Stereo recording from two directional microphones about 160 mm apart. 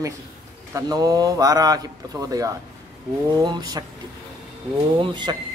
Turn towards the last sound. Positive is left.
turn(degrees=-30)  # may be behind; listen again after turning